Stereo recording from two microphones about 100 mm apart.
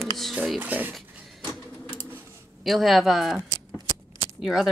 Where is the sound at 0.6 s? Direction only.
20° right (ahead or behind).